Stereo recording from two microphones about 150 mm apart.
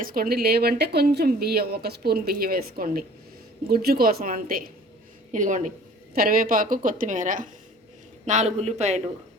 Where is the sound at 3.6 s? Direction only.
90° right; by 4.6 s 70° right (ahead or behind).